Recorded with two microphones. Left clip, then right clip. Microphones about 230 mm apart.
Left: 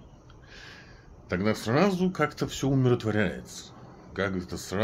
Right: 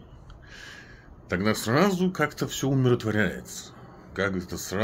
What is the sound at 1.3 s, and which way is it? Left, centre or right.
Speech, centre.